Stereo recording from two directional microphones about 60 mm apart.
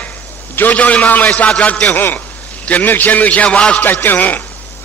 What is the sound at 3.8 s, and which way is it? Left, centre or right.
Speech, left.